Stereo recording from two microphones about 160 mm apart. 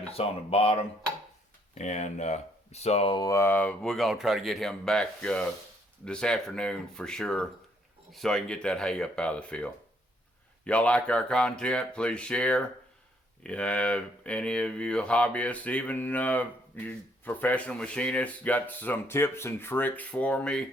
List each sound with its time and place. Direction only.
0.1 s speech: 40° left (ahead or behind)
1.7 s speech: 45° left (ahead or behind)
3.2 s speech: 15° left (ahead or behind)